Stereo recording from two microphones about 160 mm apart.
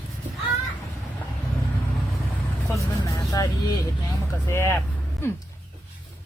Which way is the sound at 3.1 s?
20° left (ahead or behind).